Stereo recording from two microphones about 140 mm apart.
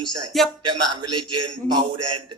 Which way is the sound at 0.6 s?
35° right (ahead or behind).